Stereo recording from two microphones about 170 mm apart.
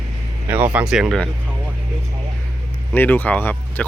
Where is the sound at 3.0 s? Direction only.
10° left (ahead or behind).